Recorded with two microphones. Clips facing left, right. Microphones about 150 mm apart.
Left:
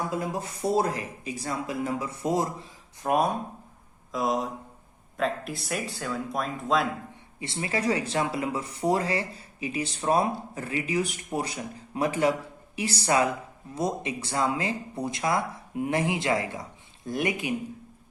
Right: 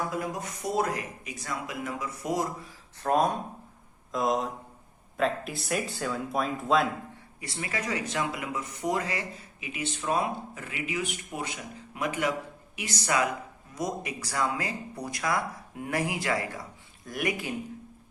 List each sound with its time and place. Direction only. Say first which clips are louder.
0.1 s speech: left 2 dB; 30° left (ahead or behind)
3.0 s speech: even; 10° left (ahead or behind)
7.3 s speech: left 5 dB; 25° left (ahead or behind)